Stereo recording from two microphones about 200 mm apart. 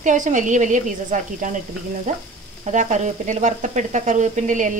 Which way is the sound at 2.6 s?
35° right (ahead or behind).